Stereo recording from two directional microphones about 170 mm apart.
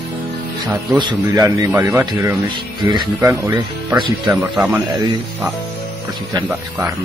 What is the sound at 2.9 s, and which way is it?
Speech, 25° right (ahead or behind).